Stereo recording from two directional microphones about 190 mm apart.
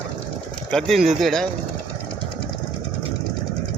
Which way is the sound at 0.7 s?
Centre (ahead or behind).